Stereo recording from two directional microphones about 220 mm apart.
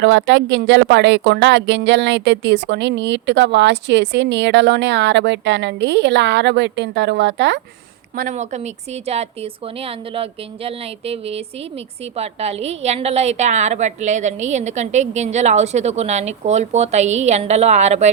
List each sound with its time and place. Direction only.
0.0 s speech: 55° right (ahead or behind)
8.1 s a woman's voice: 40° right (ahead or behind)